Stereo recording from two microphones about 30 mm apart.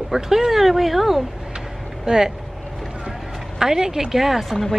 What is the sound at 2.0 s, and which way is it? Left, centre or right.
Speech, right.